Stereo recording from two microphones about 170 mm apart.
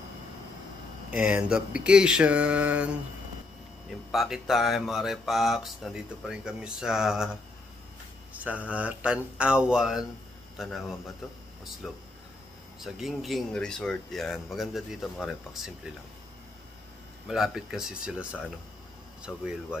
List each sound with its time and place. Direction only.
1.1 s speech: 5° right (ahead or behind)
4.1 s speech: centre (ahead or behind)
8.3 s speech: 10° right (ahead or behind)
17.3 s speech: 5° right (ahead or behind)